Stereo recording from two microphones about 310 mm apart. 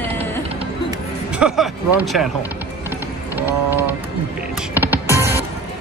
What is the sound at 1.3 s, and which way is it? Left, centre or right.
Speech, centre.